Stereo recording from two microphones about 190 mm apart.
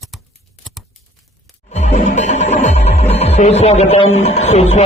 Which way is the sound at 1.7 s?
35° left (ahead or behind).